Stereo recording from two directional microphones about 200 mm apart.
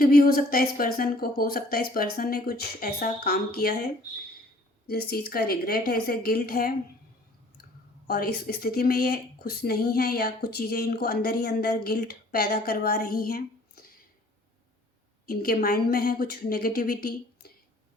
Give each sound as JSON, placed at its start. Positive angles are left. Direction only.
{"t": 0.0, "sound": "speech", "side_deg": 50}
{"t": 4.9, "sound": "speech", "side_deg": 50}
{"t": 15.3, "sound": "speech", "side_deg": 50}